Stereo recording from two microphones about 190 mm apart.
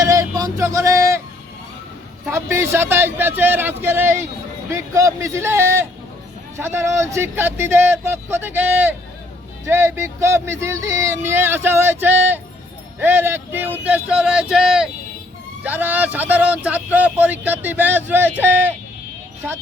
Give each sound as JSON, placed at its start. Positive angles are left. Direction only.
{"t": 0.0, "sound": "vehicle", "side_deg": -15}
{"t": 2.3, "sound": "speech", "side_deg": -10}